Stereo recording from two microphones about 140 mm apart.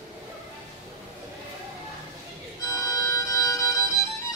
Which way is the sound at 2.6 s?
25° left (ahead or behind).